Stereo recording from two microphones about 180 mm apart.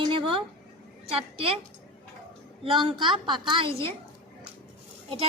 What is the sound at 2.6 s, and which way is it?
A woman's voice, 30° right (ahead or behind).